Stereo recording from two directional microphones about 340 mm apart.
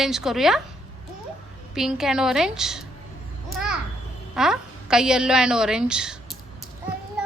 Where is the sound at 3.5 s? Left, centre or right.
Centre.